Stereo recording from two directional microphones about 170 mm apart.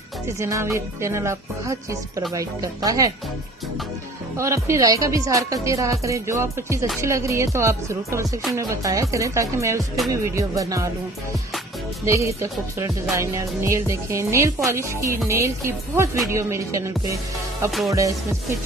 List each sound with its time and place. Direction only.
0.4 s speech: 15° right (ahead or behind)
4.4 s speech: 15° right (ahead or behind)
12.0 s speech: 15° right (ahead or behind)
17.6 s music: centre (ahead or behind)